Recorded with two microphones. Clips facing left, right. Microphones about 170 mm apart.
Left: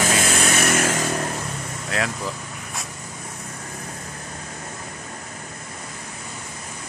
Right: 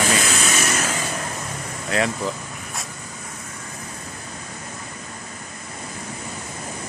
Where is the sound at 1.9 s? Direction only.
Centre (ahead or behind).